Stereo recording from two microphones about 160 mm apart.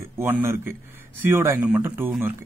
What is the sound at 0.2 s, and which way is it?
Speech, 15° right (ahead or behind).